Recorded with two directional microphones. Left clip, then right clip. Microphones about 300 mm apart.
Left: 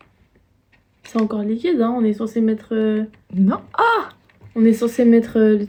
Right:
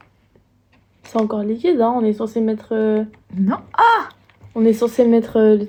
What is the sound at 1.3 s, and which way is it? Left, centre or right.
Speech, centre.